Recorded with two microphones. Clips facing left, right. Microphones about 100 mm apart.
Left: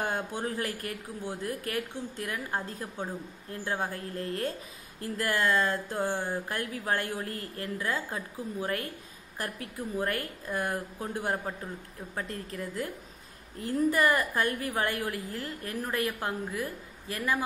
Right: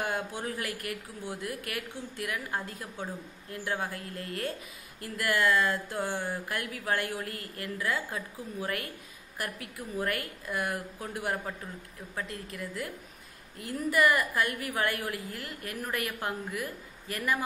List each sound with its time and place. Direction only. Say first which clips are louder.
0.0 s a woman's voice: left 1 dB; 30° left (ahead or behind)